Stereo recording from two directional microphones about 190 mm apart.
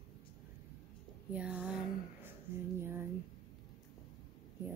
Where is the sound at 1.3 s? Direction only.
5° right (ahead or behind).